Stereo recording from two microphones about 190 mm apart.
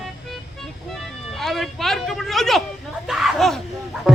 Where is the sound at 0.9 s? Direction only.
Centre (ahead or behind).